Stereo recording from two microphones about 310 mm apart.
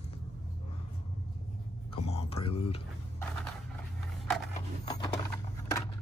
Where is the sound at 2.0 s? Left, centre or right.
Centre.